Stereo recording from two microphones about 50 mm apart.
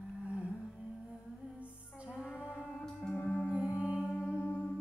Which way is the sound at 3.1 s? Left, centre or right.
Left.